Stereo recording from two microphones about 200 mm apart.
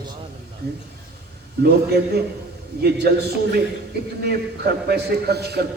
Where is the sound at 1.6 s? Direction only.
55° right (ahead or behind).